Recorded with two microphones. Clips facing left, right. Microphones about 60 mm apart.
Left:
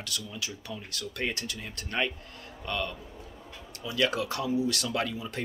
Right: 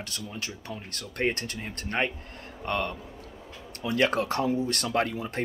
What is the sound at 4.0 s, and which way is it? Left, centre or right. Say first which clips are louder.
Speech: right 3 dB; right.